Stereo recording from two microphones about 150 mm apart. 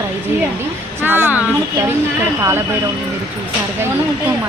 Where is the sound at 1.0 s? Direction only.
15° right (ahead or behind).